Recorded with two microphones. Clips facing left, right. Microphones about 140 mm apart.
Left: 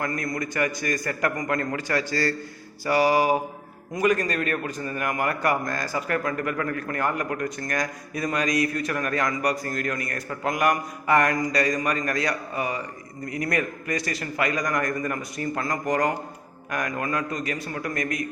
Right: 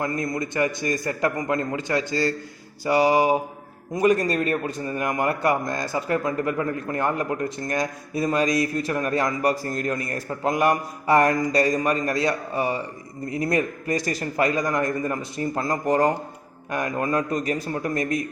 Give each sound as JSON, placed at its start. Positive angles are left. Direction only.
{"t": 0.0, "sound": "a man's voice", "side_deg": -25}